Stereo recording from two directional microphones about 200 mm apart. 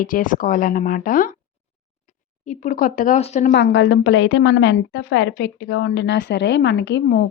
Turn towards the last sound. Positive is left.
turn(degrees=60)  # may be behind; listen again after turning